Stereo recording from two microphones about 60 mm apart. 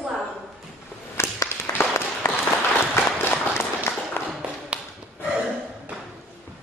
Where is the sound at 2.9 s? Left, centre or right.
Left.